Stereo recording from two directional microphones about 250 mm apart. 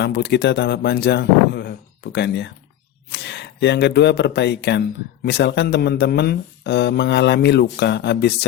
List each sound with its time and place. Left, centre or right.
0.0 s speech: left